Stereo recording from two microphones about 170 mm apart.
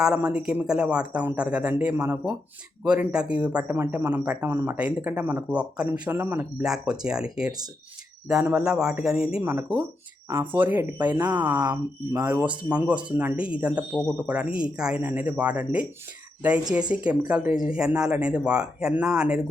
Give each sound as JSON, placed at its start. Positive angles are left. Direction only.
{"t": 0.0, "sound": "speech", "side_deg": -5}
{"t": 11.2, "sound": "speech", "side_deg": -25}
{"t": 12.2, "sound": "speech", "side_deg": -10}
{"t": 16.9, "sound": "speech", "side_deg": -5}